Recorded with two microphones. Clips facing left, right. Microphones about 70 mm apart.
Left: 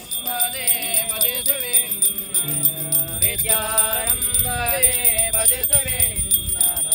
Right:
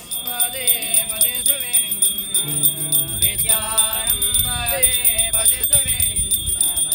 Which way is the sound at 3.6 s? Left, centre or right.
Left.